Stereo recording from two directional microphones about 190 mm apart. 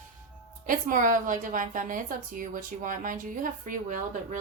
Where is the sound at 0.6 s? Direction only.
45° right (ahead or behind).